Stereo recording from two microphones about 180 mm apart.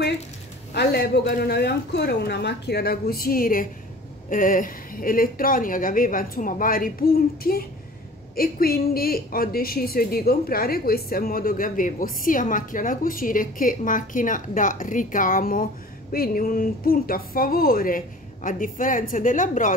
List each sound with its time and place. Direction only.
1.1 s a man's voice: 65° left (ahead or behind); by 19.7 s 45° left (ahead or behind)